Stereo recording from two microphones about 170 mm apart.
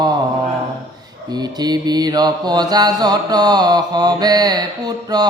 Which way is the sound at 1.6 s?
25° right (ahead or behind).